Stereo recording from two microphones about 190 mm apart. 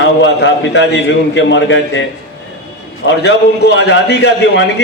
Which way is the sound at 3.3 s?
65° left (ahead or behind).